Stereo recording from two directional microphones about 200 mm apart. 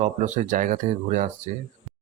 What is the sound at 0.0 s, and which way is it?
Speech, 35° right (ahead or behind).